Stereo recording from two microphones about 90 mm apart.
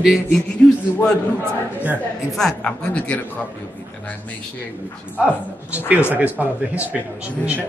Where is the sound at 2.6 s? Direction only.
15° left (ahead or behind).